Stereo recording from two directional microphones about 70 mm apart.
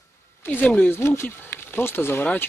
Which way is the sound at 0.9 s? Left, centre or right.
Left.